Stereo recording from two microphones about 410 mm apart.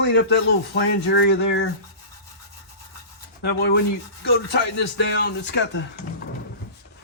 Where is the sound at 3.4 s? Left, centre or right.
Left.